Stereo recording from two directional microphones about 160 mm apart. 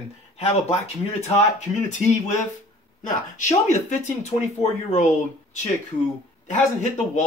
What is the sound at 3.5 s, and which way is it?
Speech, 45° left (ahead or behind).